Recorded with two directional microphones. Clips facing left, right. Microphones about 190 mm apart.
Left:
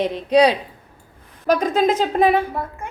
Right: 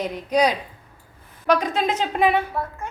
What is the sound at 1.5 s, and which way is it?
Speech, 45° left (ahead or behind).